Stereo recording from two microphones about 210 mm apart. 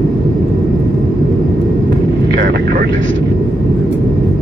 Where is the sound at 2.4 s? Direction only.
45° right (ahead or behind).